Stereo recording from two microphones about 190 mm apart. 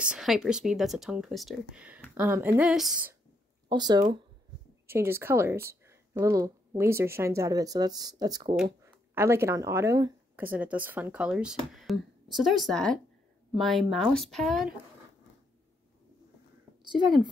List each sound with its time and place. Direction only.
0.0 s speech: 5° right (ahead or behind)
3.6 s a woman's voice: 20° right (ahead or behind); by 14.7 s centre (ahead or behind)